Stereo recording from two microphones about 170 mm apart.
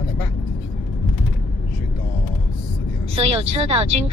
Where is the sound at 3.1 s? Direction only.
35° right (ahead or behind).